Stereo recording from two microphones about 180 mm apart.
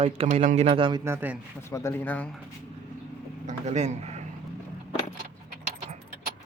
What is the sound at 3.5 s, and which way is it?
Speech, 40° right (ahead or behind).